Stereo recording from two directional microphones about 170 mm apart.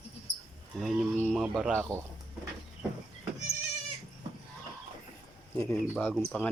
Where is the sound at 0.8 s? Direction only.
Centre (ahead or behind).